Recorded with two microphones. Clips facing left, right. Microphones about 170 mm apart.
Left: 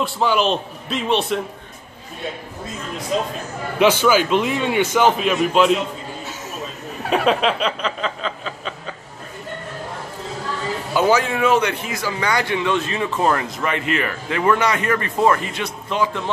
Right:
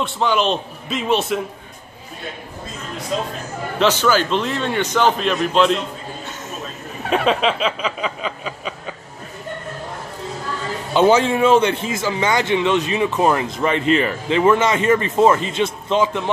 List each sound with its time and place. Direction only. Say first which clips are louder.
0.0 s a man's voice: even; centre (ahead or behind)
3.8 s a man's voice: left 2 dB; 10° left (ahead or behind); by 8.7 s 10° right (ahead or behind)
10.9 s a man's voice: right 4 dB; 25° right (ahead or behind)